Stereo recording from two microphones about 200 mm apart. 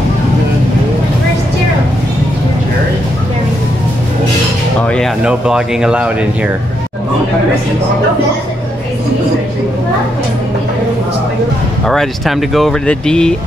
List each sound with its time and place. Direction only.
4.8 s speech: 5° left (ahead or behind)
11.8 s speech: centre (ahead or behind)